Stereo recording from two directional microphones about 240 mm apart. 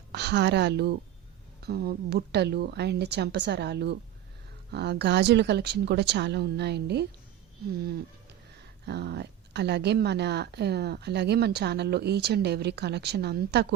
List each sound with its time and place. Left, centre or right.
0.1 s speech: right
8.9 s speech: right